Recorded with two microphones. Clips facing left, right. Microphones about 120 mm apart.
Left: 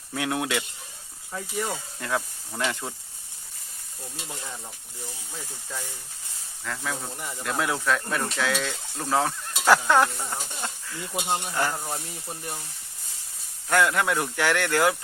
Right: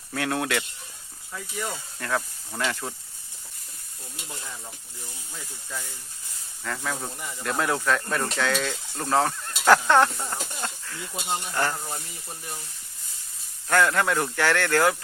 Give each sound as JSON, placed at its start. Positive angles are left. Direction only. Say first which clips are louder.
{"t": 0.1, "sound": "speech", "louder": "right 1 dB", "side_deg": 15}
{"t": 4.2, "sound": "speech", "louder": "left 1 dB", "side_deg": 25}
{"t": 6.7, "sound": "speech", "louder": "right 1 dB", "side_deg": 0}
{"t": 13.7, "sound": "speech", "louder": "right 1 dB", "side_deg": 15}